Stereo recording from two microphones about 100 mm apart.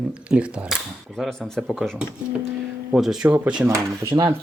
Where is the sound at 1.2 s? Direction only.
5° left (ahead or behind); by 3.6 s 10° right (ahead or behind).